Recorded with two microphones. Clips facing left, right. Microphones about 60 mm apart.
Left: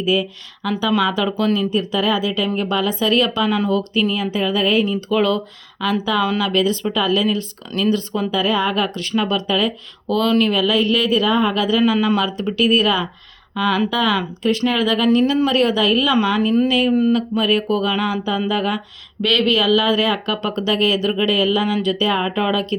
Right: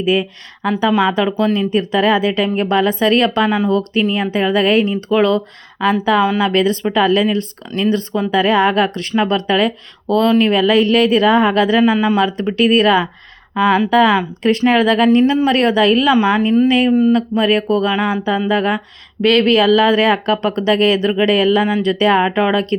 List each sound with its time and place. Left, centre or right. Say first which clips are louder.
0.0 s speech: right 3 dB; right
1.7 s speech: right 5 dB; right
8.3 s speech: right 6 dB; right
8.7 s speech: right 4 dB; right
10.5 s speech: right 5 dB; right
11.8 s speech: right 3 dB; right
12.2 s speech: right 4 dB; right
16.2 s speech: right 4 dB; right